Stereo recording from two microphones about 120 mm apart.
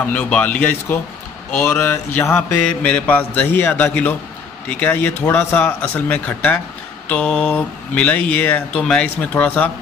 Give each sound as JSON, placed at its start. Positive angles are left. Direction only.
{"t": 0.0, "sound": "mantra", "side_deg": 10}